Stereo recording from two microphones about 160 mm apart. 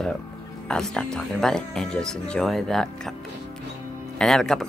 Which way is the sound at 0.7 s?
5° left (ahead or behind).